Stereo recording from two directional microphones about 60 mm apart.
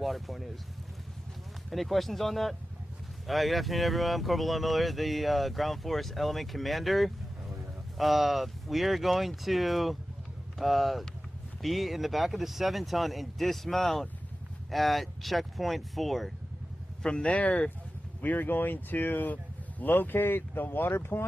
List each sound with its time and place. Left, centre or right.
0.0 s speech: centre
1.7 s speech: centre
17.0 s speech: centre; by 21.3 s left